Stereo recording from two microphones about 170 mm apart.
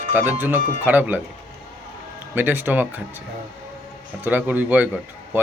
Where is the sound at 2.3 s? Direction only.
10° right (ahead or behind).